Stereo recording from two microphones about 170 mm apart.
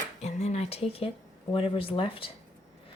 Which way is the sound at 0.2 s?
40° left (ahead or behind).